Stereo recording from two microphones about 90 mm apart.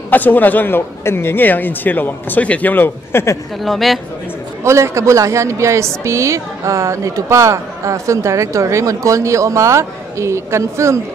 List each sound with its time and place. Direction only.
0.1 s a man's voice: 20° left (ahead or behind)
3.6 s speech: centre (ahead or behind)
4.6 s a woman's voice: 30° right (ahead or behind)